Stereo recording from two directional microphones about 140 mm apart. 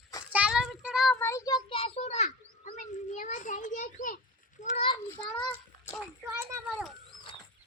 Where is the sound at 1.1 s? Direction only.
20° left (ahead or behind).